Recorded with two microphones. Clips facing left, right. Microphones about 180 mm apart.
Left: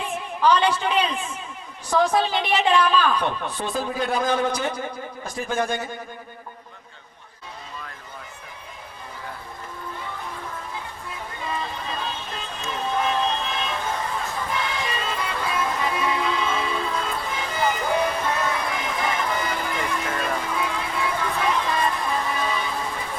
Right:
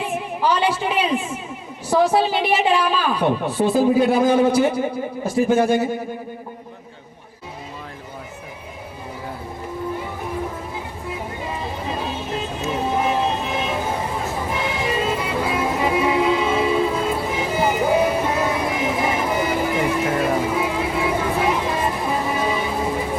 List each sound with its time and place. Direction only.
0.0 s a woman's voice: 10° right (ahead or behind)
11.1 s music: 15° right (ahead or behind)
12.5 s vehicle: 20° right (ahead or behind)
12.7 s a sound: 10° right (ahead or behind)